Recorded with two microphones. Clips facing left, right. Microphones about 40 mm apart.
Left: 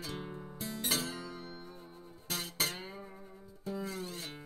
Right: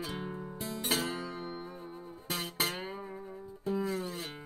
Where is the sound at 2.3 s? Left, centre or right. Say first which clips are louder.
Right 2 dB; right.